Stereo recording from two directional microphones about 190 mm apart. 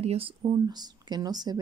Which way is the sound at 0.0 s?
30° right (ahead or behind).